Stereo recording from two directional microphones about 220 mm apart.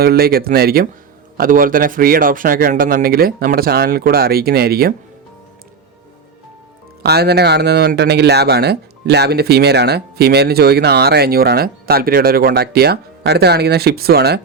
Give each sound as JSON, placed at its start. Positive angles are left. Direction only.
{"t": 0.0, "sound": "speech", "side_deg": -45}
{"t": 7.0, "sound": "speech", "side_deg": -45}